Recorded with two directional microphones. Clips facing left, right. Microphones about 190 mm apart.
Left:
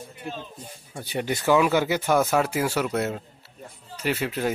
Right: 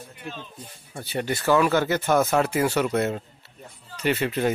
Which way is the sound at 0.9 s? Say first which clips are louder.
Even; 10° left (ahead or behind).